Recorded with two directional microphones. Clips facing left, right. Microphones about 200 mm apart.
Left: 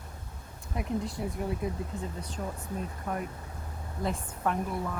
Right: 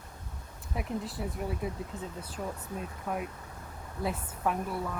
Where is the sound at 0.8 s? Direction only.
5° right (ahead or behind).